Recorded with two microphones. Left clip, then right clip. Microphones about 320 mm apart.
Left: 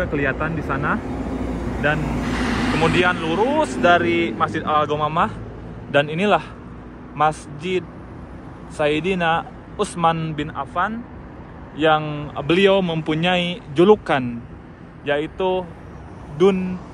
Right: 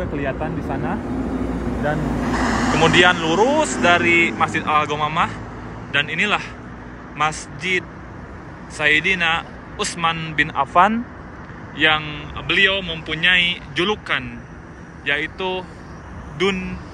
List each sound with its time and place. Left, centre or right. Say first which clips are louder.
0.0 s speech: left 3 dB; centre
2.2 s vehicle: right 4 dB; centre
2.8 s a man's voice: right 5 dB; centre